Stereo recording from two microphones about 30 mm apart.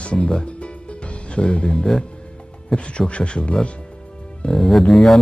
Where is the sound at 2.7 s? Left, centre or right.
Centre.